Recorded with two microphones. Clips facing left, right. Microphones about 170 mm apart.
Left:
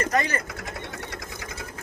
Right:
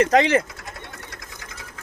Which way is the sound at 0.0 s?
90° right.